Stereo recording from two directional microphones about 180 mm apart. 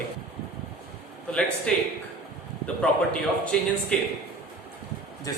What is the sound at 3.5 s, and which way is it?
Speech, 5° left (ahead or behind).